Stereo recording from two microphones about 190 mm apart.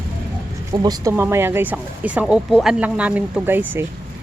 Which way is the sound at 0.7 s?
20° right (ahead or behind).